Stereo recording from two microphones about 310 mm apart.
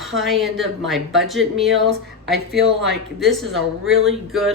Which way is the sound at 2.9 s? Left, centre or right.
Centre.